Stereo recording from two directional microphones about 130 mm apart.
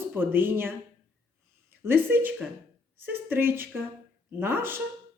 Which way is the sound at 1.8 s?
15° right (ahead or behind).